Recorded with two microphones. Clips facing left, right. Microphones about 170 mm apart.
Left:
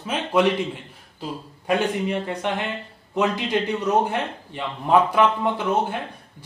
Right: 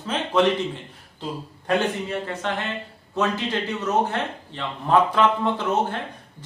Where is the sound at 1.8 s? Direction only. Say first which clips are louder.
Left 2 dB; 15° left (ahead or behind).